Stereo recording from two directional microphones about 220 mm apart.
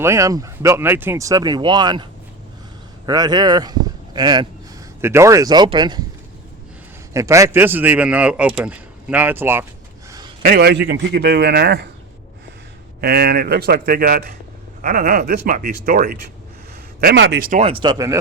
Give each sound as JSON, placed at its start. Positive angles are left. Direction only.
{"t": 0.0, "sound": "speech", "side_deg": -15}
{"t": 3.1, "sound": "speech", "side_deg": -20}
{"t": 7.1, "sound": "speech", "side_deg": -15}
{"t": 10.1, "sound": "a sound", "side_deg": -20}
{"t": 10.4, "sound": "a man's voice", "side_deg": -40}
{"t": 13.0, "sound": "a man's voice", "side_deg": -45}
{"t": 17.5, "sound": "speech", "side_deg": -25}